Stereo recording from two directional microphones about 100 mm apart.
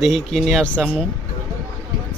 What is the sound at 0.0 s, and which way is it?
Speech, centre (ahead or behind).